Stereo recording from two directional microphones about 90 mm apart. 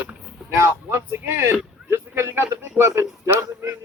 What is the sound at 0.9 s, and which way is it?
A man's voice, 25° right (ahead or behind).